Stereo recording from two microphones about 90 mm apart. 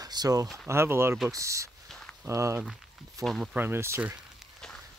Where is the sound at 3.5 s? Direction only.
25° right (ahead or behind).